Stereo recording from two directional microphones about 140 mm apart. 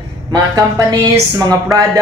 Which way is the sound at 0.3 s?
25° right (ahead or behind).